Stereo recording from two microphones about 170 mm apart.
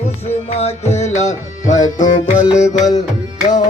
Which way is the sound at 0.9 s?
45° left (ahead or behind).